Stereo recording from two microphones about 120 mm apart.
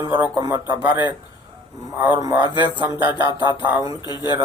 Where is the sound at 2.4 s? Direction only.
40° left (ahead or behind).